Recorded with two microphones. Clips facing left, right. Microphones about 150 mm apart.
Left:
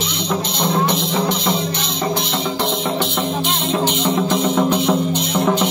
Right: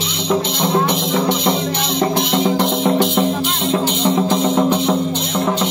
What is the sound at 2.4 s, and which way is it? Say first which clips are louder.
Music: right 5 dB; 45° right (ahead or behind).